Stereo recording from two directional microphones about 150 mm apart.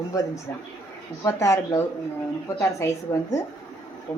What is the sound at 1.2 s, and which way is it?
Speech, 20° left (ahead or behind).